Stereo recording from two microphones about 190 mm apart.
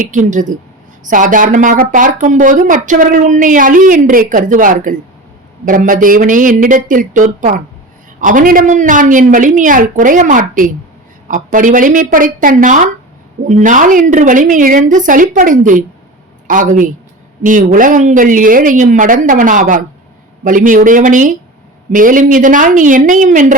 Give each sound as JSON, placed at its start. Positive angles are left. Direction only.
{"t": 0.0, "sound": "speech", "side_deg": -40}